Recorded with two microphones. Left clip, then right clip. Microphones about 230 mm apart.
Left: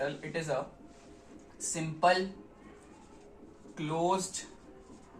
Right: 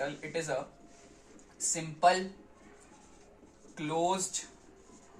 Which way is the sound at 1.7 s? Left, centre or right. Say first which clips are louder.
Right 1 dB; right.